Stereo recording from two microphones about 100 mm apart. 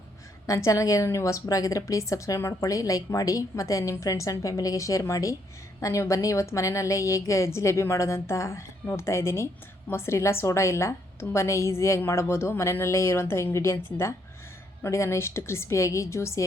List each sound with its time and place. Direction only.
0.4 s a woman's voice: 35° left (ahead or behind)